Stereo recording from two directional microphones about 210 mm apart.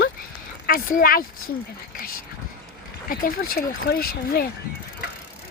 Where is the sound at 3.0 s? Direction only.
45° left (ahead or behind).